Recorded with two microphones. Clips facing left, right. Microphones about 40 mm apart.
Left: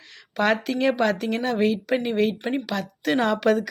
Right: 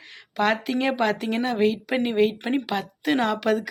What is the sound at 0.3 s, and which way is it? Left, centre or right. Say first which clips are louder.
Speech: left 1 dB; centre.